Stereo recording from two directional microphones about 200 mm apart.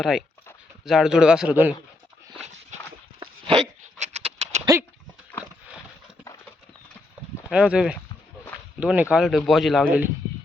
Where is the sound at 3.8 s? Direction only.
35° right (ahead or behind).